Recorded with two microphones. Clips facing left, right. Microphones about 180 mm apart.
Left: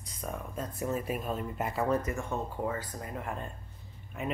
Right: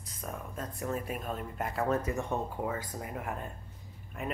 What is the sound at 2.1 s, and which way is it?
A woman's voice, 20° right (ahead or behind).